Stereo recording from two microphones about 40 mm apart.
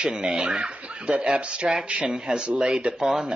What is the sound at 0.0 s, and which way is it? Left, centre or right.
Speech, right.